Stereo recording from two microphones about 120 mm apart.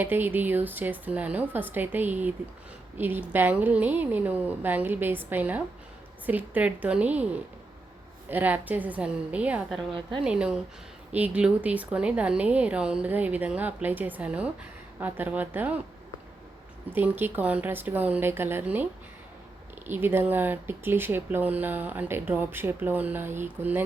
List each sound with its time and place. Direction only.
0.0 s speech: 15° right (ahead or behind)
8.3 s speech: 15° right (ahead or behind)
16.9 s speech: 15° right (ahead or behind)
19.9 s speech: 20° right (ahead or behind)